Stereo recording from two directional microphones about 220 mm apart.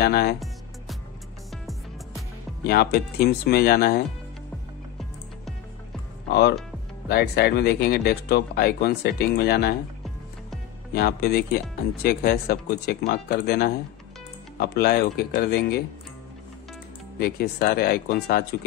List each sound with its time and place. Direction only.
0.0 s speech: 45° left (ahead or behind)
1.5 s music: centre (ahead or behind)
2.6 s speech: 45° left (ahead or behind)
7.1 s speech: 45° left (ahead or behind)
10.9 s speech: 45° left (ahead or behind)
17.2 s speech: 45° left (ahead or behind)